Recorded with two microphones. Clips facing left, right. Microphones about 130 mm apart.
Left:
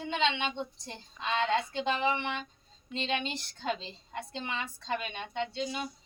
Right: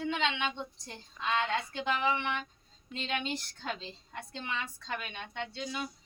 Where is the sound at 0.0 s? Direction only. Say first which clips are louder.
Left 2 dB; 25° left (ahead or behind).